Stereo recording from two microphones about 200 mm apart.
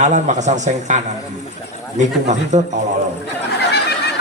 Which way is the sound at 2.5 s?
35° right (ahead or behind).